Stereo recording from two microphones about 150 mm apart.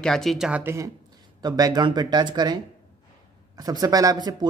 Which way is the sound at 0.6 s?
15° right (ahead or behind).